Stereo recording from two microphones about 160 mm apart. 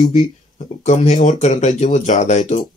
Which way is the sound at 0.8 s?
45° left (ahead or behind).